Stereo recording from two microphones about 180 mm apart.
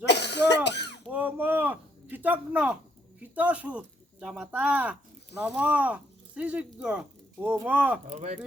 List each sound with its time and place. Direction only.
0.0 s cough: 70° left (ahead or behind)
1.1 s a sound: 10° right (ahead or behind)
3.3 s speech: 5° right (ahead or behind)